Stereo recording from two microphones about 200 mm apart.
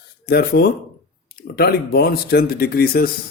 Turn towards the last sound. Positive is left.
turn(degrees=50)  # may be behind; listen again after turning